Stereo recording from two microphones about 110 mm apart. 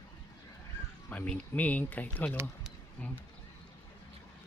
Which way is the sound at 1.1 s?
10° left (ahead or behind).